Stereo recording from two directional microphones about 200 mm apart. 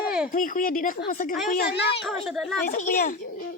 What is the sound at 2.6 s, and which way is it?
Speech, 40° left (ahead or behind).